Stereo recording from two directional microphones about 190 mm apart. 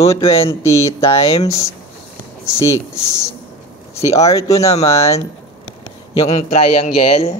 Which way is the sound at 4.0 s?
15° left (ahead or behind).